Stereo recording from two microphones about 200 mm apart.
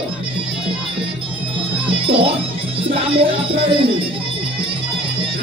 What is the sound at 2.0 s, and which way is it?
Speech, 25° right (ahead or behind).